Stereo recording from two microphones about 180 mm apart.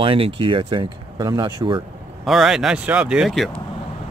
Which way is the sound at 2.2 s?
Centre (ahead or behind).